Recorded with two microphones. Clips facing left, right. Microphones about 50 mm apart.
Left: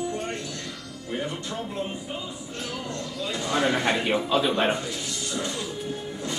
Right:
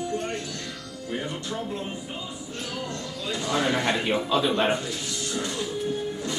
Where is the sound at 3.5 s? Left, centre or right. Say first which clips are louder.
Left 1 dB; centre.